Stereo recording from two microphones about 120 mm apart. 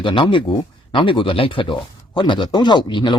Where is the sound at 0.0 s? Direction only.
45° left (ahead or behind).